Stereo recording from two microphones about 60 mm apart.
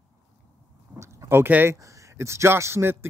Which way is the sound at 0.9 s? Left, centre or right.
Right.